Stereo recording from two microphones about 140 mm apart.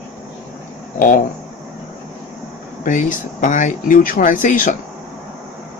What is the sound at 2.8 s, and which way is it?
Speech, 65° left (ahead or behind).